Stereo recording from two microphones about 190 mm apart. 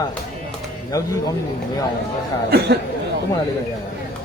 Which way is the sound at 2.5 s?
60° right (ahead or behind).